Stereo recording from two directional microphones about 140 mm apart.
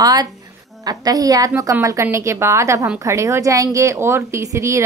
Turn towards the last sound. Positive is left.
turn(degrees=-20)  # may be behind; listen again after turning